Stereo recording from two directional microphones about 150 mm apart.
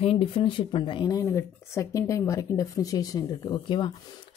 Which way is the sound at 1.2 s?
20° left (ahead or behind).